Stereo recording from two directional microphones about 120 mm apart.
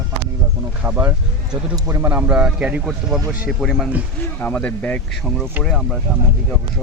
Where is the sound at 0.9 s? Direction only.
15° right (ahead or behind); by 3.8 s centre (ahead or behind).